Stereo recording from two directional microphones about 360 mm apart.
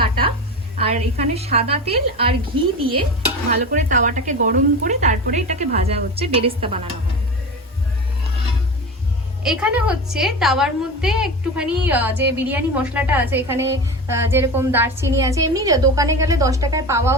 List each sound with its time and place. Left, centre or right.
0.0 s a sound: centre
0.8 s a woman's voice: centre
3.6 s a woman's voice: right
9.4 s a woman's voice: centre